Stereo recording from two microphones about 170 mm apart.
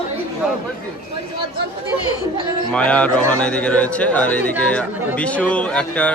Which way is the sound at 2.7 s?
5° left (ahead or behind).